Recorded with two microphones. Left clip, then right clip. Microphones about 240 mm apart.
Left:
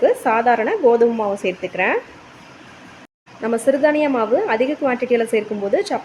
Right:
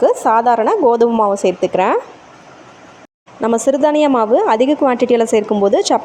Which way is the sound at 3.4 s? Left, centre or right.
Right.